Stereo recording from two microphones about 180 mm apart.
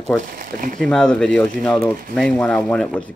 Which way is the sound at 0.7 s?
5° left (ahead or behind).